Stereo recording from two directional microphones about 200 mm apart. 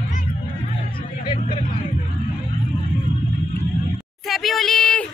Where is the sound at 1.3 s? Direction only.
30° left (ahead or behind).